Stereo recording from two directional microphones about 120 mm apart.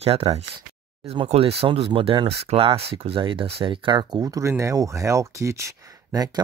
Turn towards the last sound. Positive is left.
turn(degrees=-25)  # may be behind; listen again after turning